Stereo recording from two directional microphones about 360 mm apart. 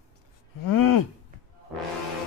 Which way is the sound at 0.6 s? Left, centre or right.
Left.